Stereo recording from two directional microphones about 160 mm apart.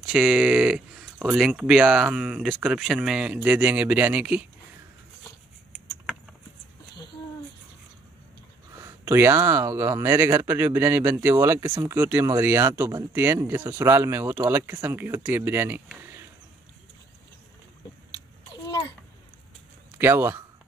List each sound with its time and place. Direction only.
0.0 s speech: 5° right (ahead or behind)
8.8 s speech: 15° right (ahead or behind)
20.0 s speech: 15° right (ahead or behind)